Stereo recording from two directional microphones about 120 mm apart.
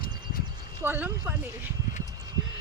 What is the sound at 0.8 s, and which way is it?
Speech, 15° right (ahead or behind).